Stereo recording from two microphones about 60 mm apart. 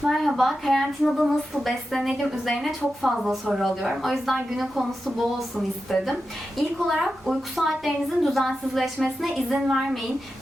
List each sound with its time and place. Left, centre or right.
0.1 s a woman's voice: centre